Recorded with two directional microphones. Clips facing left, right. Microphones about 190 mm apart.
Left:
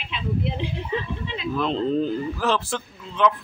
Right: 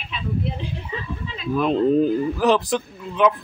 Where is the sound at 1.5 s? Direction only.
10° right (ahead or behind).